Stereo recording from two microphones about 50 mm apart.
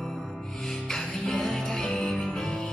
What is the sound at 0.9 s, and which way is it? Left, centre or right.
Music, centre.